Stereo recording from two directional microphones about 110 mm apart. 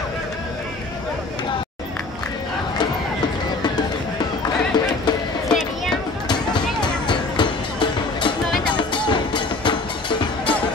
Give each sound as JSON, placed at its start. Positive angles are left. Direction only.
{"t": 4.7, "sound": "music", "side_deg": 40}
{"t": 7.1, "sound": "music", "side_deg": 45}